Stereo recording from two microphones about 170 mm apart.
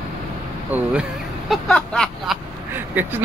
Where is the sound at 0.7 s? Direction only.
10° right (ahead or behind).